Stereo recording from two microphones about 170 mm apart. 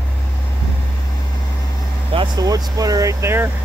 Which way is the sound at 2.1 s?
25° right (ahead or behind).